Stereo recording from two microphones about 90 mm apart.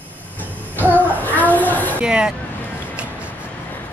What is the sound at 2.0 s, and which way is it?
Speech, 10° right (ahead or behind).